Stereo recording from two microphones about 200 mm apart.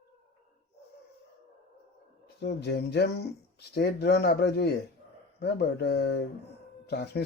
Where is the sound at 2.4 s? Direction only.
55° left (ahead or behind).